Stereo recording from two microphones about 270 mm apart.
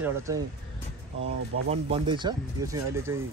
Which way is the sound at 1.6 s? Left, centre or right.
Right.